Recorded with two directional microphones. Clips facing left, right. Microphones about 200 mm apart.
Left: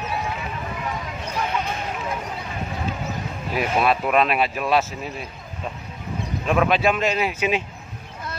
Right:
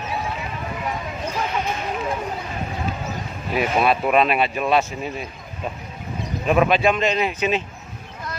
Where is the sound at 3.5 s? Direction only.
Centre (ahead or behind).